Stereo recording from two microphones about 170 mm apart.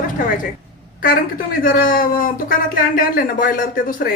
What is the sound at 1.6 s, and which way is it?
Speech, 55° left (ahead or behind).